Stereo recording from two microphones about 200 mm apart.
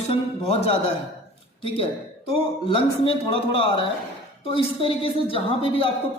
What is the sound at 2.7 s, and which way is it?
A woman's voice, 25° left (ahead or behind).